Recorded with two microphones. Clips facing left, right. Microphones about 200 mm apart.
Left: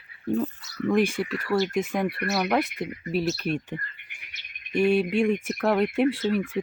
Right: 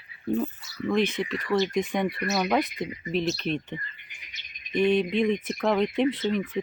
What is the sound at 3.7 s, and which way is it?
Bird, 55° left (ahead or behind).